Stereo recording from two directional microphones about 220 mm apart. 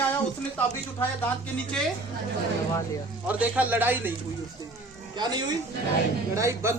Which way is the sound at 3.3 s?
5° right (ahead or behind).